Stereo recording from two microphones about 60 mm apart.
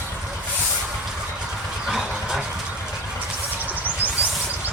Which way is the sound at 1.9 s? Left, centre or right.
Centre.